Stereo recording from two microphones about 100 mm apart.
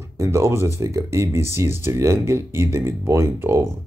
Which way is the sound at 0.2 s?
30° right (ahead or behind).